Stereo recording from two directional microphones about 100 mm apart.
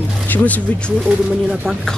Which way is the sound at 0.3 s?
15° left (ahead or behind).